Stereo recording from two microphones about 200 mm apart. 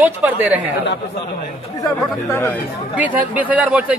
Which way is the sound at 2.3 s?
10° left (ahead or behind).